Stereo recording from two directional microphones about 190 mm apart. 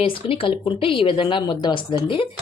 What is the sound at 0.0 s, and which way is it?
Speech, 30° left (ahead or behind).